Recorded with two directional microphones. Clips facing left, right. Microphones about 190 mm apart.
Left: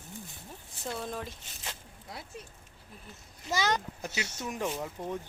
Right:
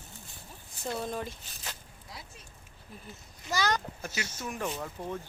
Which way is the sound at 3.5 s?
25° left (ahead or behind).